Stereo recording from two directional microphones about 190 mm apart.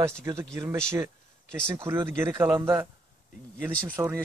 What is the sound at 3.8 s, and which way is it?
Speech, 10° right (ahead or behind).